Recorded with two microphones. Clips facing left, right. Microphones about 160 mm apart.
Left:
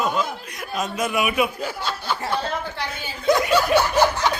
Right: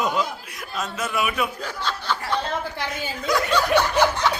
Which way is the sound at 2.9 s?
25° left (ahead or behind).